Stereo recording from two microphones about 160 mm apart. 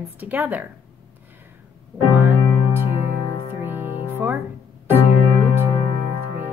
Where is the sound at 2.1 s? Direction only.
15° right (ahead or behind).